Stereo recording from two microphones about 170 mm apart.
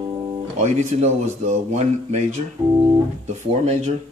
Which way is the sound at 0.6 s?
40° right (ahead or behind).